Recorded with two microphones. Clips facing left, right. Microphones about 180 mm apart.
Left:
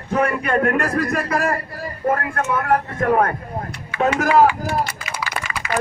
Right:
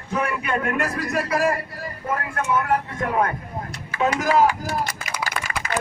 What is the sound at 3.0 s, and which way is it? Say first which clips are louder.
Speech: left 7 dB; 55° left (ahead or behind).